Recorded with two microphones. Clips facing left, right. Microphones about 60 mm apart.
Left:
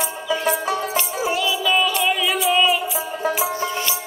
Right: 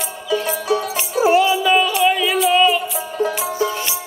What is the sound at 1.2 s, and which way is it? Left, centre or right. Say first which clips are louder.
Music: right 10 dB; right.